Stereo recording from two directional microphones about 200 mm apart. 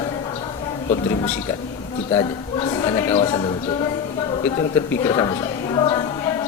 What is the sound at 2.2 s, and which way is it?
A woman's voice, 20° left (ahead or behind).